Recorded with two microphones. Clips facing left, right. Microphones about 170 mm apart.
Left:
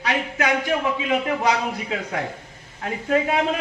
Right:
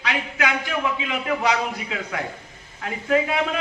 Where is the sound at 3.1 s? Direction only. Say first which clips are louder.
Left 1 dB; 40° left (ahead or behind).